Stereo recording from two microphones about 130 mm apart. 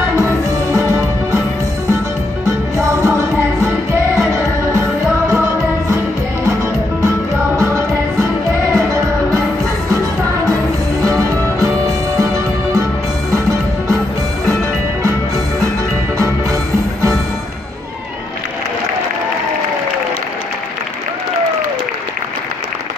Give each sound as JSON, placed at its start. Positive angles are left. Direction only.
{"t": 0.1, "sound": "music", "side_deg": -25}
{"t": 2.4, "sound": "music", "side_deg": -25}
{"t": 5.3, "sound": "music", "side_deg": -20}
{"t": 7.5, "sound": "music", "side_deg": -20}
{"t": 11.1, "sound": "music", "side_deg": -25}